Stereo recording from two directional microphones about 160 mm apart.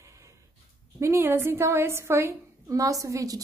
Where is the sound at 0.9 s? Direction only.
15° right (ahead or behind).